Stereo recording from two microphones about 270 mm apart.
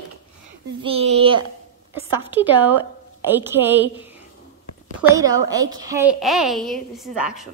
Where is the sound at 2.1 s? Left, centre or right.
Centre.